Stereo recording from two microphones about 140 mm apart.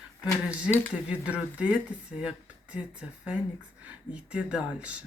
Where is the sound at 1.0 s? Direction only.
10° right (ahead or behind).